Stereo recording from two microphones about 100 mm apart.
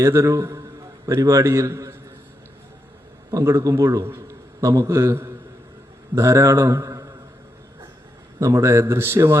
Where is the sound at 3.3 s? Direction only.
30° right (ahead or behind).